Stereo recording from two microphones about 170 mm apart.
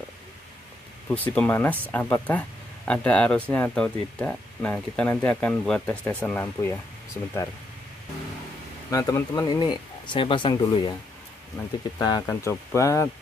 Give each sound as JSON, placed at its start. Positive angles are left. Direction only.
{"t": 1.0, "sound": "speech", "side_deg": 10}
{"t": 8.9, "sound": "speech", "side_deg": 20}
{"t": 12.0, "sound": "speech", "side_deg": 20}